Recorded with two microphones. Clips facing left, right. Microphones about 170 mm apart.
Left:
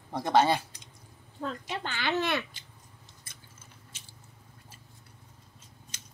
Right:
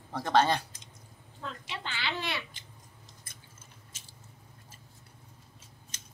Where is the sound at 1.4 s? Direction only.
45° left (ahead or behind).